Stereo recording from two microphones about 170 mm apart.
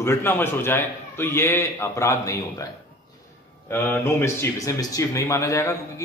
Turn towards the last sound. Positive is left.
turn(degrees=15)  # may be behind; listen again after turning